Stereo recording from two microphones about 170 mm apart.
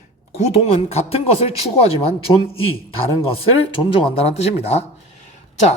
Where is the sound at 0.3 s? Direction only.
40° left (ahead or behind).